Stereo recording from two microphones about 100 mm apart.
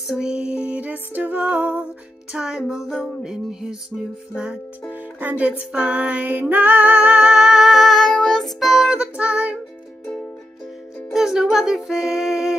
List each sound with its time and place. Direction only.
0.1 s music: 10° right (ahead or behind)
4.9 s music: 15° right (ahead or behind)
11.1 s music: 5° right (ahead or behind)